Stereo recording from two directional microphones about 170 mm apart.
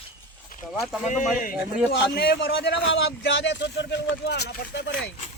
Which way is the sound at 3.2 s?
90° left.